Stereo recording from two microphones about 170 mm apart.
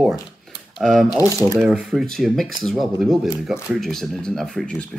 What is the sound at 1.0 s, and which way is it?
Speech, 20° left (ahead or behind).